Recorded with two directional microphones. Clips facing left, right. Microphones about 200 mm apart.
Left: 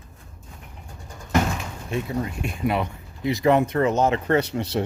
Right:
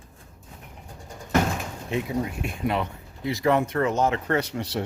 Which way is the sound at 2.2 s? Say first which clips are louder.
Left 2 dB; centre (ahead or behind).